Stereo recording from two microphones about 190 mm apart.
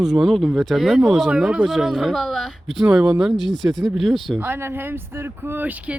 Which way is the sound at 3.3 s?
25° left (ahead or behind).